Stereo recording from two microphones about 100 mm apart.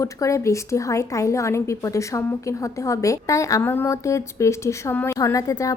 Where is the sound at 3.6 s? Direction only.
20° left (ahead or behind).